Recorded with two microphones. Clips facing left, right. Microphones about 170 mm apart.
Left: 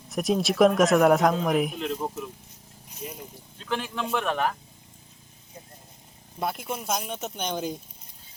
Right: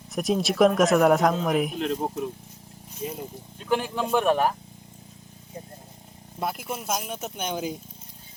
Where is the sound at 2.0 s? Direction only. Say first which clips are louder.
Right 3 dB; 65° right (ahead or behind).